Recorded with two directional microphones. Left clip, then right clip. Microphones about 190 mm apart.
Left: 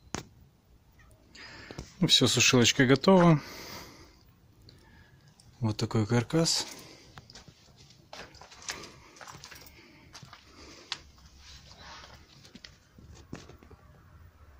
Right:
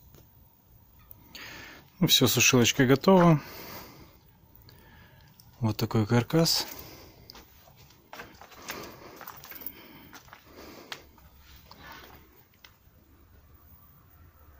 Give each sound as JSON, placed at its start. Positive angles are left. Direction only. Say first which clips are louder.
{"t": 1.3, "sound": "a sound", "louder": "right 2 dB", "side_deg": -10}
{"t": 2.5, "sound": "speech", "louder": "even", "side_deg": -5}
{"t": 5.6, "sound": "speech", "louder": "right 2 dB", "side_deg": -15}
{"t": 8.1, "sound": "horse", "louder": "right 1 dB", "side_deg": -15}
{"t": 9.4, "sound": "dog", "louder": "right 1 dB", "side_deg": -20}
{"t": 10.4, "sound": "a sound", "louder": "right 3 dB", "side_deg": -15}